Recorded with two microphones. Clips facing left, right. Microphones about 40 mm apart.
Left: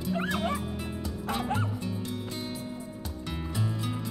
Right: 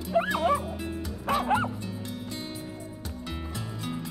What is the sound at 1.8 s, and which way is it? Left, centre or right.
Bow-wow, centre.